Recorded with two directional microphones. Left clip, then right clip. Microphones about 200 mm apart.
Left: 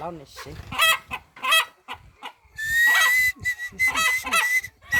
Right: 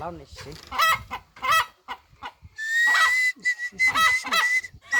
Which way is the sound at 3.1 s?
Centre (ahead or behind).